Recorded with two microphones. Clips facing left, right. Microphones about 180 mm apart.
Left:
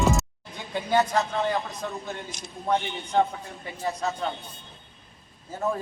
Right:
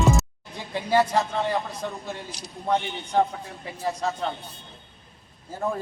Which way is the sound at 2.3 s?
35° right (ahead or behind).